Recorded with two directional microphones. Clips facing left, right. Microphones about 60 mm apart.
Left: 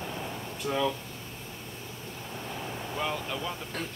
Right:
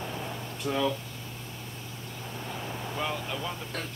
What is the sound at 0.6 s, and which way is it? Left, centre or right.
Speech, centre.